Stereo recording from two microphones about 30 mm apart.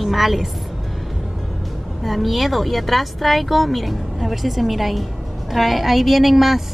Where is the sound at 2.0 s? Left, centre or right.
Centre.